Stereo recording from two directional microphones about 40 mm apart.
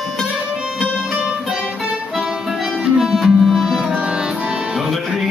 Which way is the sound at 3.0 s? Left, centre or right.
Centre.